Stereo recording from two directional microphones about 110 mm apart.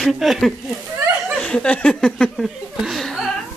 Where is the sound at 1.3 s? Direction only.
10° left (ahead or behind).